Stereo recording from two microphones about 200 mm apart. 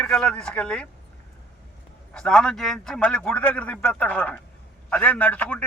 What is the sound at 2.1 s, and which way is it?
A man's voice, 5° left (ahead or behind).